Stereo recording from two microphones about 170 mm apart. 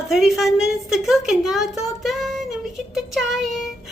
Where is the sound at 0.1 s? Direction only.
Centre (ahead or behind).